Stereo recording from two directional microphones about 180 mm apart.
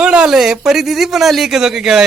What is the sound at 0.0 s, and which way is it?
Speech, 5° right (ahead or behind).